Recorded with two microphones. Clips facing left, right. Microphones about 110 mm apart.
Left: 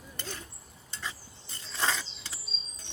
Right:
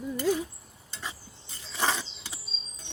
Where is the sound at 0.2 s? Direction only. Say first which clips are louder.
Right 16 dB; 10° right (ahead or behind).